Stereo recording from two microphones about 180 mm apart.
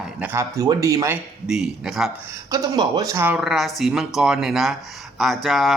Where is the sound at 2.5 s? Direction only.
20° right (ahead or behind); by 5.7 s centre (ahead or behind).